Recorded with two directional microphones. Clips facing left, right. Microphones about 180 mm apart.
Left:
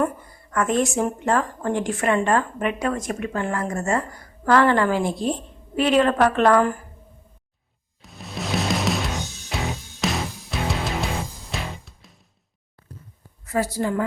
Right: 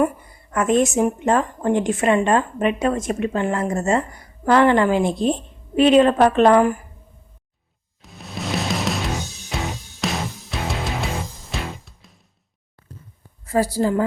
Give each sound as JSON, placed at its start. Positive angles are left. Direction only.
{"t": 0.0, "sound": "a woman's voice", "side_deg": -20}
{"t": 8.0, "sound": "music", "side_deg": 0}
{"t": 13.4, "sound": "speech", "side_deg": -30}